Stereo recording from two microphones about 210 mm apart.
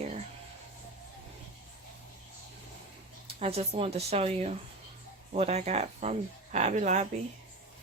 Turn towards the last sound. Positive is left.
turn(degrees=-35)  # may be behind; listen again after turning